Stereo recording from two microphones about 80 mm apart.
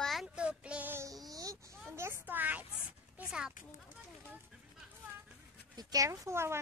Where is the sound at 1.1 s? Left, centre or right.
Right.